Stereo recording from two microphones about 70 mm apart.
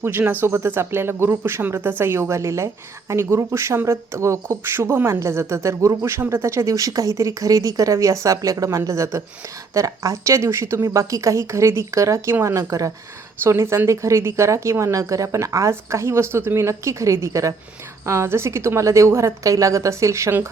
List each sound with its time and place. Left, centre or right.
0.0 s speech: right
16.6 s speech: right